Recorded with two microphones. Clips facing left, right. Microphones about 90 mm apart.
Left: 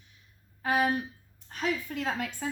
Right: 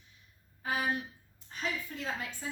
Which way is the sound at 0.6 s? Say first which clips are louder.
Left 6 dB; 75° left (ahead or behind).